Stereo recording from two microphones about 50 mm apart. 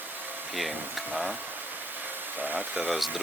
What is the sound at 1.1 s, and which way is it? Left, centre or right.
Speech, centre.